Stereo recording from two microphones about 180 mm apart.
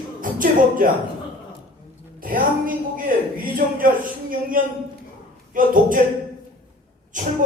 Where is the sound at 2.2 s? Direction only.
50° right (ahead or behind).